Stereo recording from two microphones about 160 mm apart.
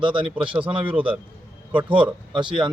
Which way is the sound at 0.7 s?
35° right (ahead or behind).